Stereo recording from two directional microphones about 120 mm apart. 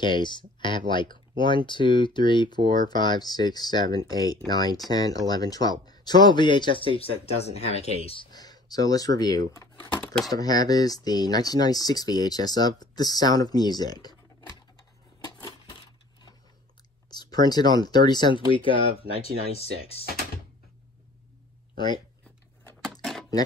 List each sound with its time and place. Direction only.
0.0 s speech: 40° left (ahead or behind)
8.3 s speech: 35° left (ahead or behind)
9.8 s typewriter: 10° left (ahead or behind)
10.3 s speech: 30° left (ahead or behind)
17.1 s speech: 35° left (ahead or behind); by 20.1 s 55° left (ahead or behind)
21.7 s speech: 35° left (ahead or behind)